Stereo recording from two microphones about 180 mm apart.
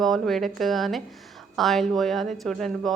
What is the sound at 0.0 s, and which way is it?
A woman's voice, centre (ahead or behind).